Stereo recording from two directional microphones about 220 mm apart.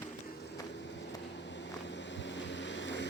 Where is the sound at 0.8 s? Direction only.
55° left (ahead or behind).